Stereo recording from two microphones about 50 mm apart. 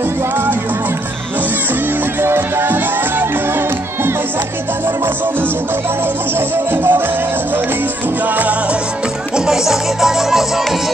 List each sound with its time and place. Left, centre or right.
2.2 s music: right
2.6 s music: right
6.5 s music: right
9.5 s music: centre